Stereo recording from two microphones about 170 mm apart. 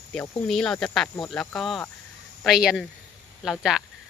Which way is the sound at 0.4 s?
5° left (ahead or behind).